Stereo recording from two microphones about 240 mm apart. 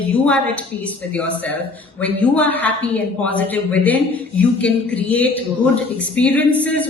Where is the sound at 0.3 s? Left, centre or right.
Centre.